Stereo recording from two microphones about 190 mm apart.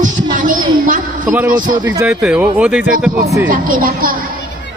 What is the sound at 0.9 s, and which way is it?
Speech, 45° right (ahead or behind).